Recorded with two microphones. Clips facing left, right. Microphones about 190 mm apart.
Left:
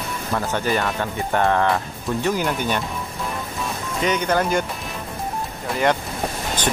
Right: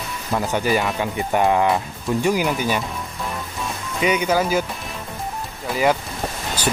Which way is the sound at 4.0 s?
10° right (ahead or behind).